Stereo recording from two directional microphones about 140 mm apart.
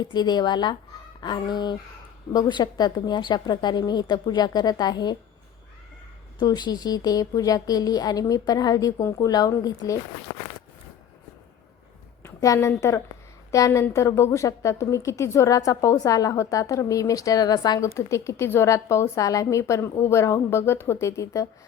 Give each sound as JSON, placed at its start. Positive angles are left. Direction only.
{"t": 0.1, "sound": "a woman's voice", "side_deg": 30}
{"t": 6.4, "sound": "a woman's voice", "side_deg": 25}
{"t": 12.4, "sound": "a woman's voice", "side_deg": 25}